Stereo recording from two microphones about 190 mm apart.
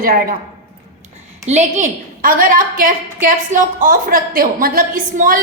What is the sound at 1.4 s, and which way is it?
A woman's voice, 35° right (ahead or behind).